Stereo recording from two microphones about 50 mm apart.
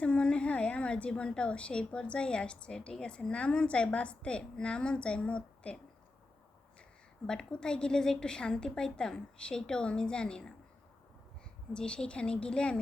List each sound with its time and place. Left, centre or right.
0.0 s a woman's voice: left
7.3 s a woman's voice: centre
11.7 s a woman's voice: centre